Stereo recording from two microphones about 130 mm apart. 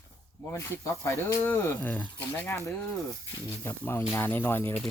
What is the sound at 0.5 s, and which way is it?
Speech, 20° left (ahead or behind).